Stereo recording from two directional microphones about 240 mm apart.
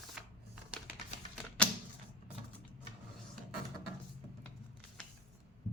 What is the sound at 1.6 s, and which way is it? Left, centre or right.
Typewriter, centre.